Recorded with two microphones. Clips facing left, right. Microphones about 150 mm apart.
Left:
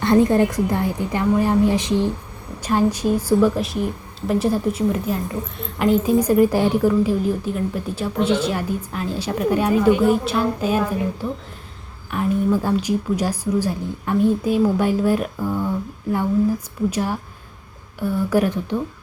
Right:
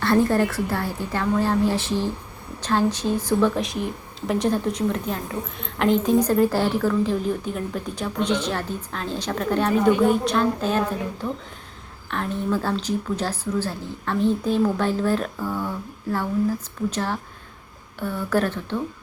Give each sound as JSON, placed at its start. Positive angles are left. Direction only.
{"t": 0.0, "sound": "a woman's voice", "side_deg": 20}
{"t": 12.1, "sound": "a woman's voice", "side_deg": 10}
{"t": 16.9, "sound": "a woman's voice", "side_deg": 10}